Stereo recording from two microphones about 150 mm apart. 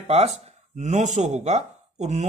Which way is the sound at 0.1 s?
45° right (ahead or behind).